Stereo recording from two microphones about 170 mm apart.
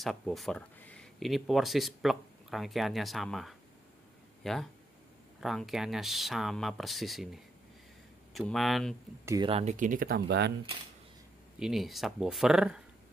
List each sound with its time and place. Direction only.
0.0 s speech: centre (ahead or behind)
8.3 s speech: centre (ahead or behind)
9.2 s speech: 20° right (ahead or behind)
9.5 s speech: 40° right (ahead or behind); by 10.5 s 75° right (ahead or behind)
11.6 s speech: centre (ahead or behind)